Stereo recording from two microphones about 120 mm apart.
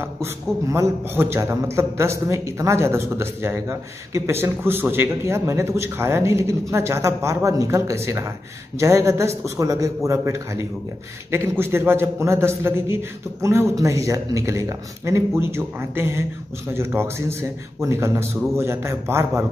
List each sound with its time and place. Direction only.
0.0 s a man's voice: 25° right (ahead or behind)